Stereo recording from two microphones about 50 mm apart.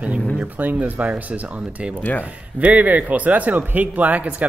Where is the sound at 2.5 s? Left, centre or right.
Right.